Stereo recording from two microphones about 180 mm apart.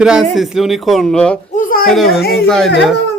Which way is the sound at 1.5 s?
50° left (ahead or behind).